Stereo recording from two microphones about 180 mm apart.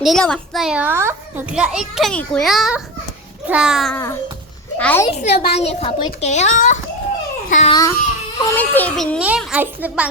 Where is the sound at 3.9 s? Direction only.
15° left (ahead or behind).